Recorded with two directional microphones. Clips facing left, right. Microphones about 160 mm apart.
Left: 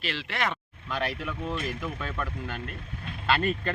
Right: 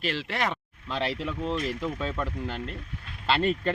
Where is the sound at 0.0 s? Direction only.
40° right (ahead or behind).